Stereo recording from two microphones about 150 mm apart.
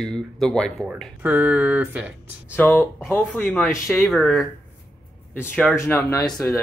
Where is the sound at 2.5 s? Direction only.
15° left (ahead or behind).